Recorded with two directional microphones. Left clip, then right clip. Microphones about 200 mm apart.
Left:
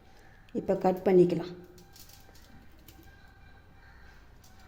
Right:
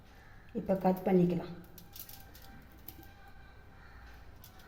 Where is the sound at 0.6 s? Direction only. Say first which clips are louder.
Left 4 dB; 60° left (ahead or behind).